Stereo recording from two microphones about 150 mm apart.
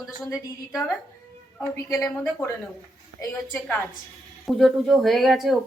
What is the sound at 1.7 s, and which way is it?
Speech, 15° left (ahead or behind).